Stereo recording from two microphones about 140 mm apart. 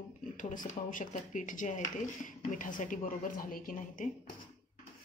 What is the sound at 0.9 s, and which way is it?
Speech, 70° left (ahead or behind).